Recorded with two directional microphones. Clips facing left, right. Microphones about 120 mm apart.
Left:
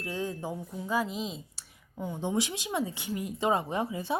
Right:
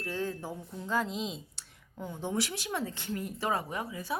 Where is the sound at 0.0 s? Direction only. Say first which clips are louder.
Left 1 dB; 15° left (ahead or behind).